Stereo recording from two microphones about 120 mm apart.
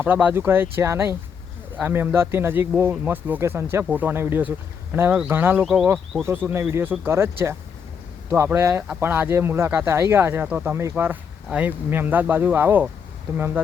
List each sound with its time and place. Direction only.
0.0 s speech: 15° right (ahead or behind)